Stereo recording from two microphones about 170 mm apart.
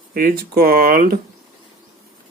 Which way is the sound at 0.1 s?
55° right (ahead or behind).